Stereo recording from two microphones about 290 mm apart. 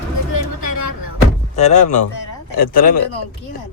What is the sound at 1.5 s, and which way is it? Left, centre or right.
Speech, left.